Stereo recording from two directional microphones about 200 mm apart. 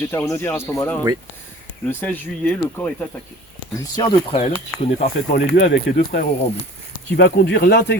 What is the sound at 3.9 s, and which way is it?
Speech, 25° left (ahead or behind).